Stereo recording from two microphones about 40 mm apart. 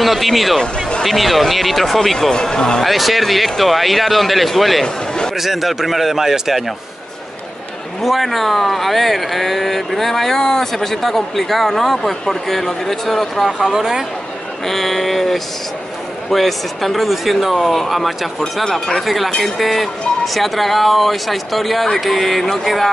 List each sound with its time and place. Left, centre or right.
0.0 s speech: centre
2.8 s speech: centre
4.8 s a man's voice: centre
5.3 s speech: centre
8.0 s speech: centre
14.7 s speech: centre